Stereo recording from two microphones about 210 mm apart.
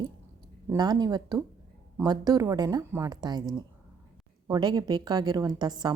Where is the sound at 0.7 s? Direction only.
20° right (ahead or behind).